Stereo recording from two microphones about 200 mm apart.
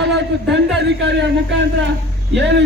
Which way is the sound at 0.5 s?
60° right (ahead or behind).